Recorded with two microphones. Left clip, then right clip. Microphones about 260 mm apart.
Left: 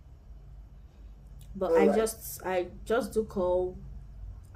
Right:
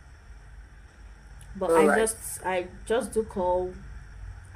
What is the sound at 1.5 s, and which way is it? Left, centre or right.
A woman's voice, left.